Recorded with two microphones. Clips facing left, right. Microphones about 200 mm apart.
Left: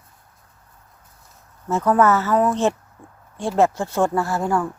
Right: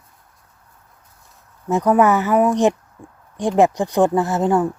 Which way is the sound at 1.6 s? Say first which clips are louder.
Right 2 dB; 15° right (ahead or behind).